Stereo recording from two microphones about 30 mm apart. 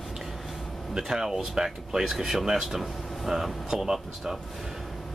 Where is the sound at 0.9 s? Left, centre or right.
Centre.